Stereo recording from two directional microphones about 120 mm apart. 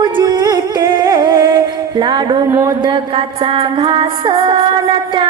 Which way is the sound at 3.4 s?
50° right (ahead or behind).